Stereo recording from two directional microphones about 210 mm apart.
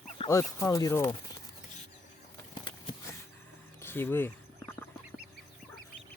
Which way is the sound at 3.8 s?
10° left (ahead or behind).